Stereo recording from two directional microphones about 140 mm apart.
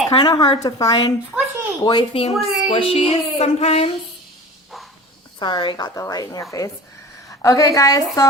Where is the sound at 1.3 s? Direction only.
5° right (ahead or behind).